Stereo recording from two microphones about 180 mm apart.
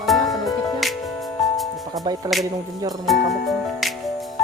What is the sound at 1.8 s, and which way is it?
Speech, 20° right (ahead or behind).